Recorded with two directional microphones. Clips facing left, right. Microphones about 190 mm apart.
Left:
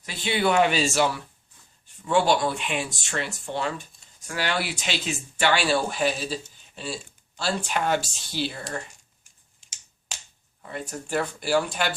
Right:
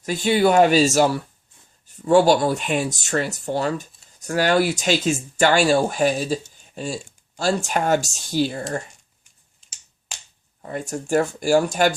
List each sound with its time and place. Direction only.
0.0 s speech: 45° right (ahead or behind)
10.6 s speech: 45° right (ahead or behind)